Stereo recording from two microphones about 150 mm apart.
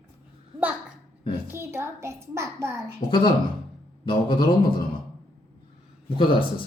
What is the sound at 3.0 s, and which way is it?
Speech, 30° left (ahead or behind).